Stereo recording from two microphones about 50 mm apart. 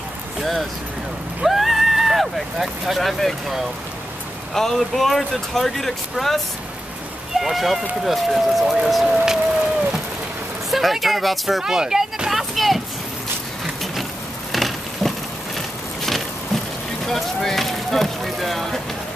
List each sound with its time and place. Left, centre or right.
0.4 s speech: centre
4.6 s speech: centre
10.7 s speech: centre
11.6 s a sound: centre
14.5 s a sound: centre
17.0 s speech: centre